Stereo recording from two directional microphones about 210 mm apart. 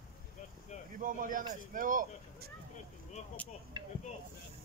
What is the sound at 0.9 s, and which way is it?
A man's voice, 40° right (ahead or behind).